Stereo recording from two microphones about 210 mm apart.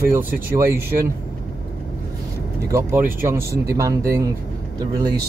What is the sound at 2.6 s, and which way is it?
Speech, 15° right (ahead or behind).